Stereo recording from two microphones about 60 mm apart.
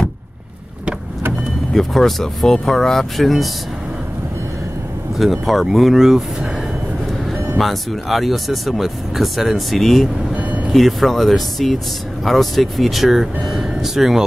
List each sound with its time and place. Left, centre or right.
1.7 s speech: centre
5.2 s speech: centre
7.2 s speech: centre
10.3 s vehicle: right
10.7 s speech: centre